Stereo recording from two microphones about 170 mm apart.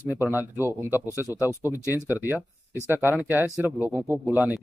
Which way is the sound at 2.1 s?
10° right (ahead or behind).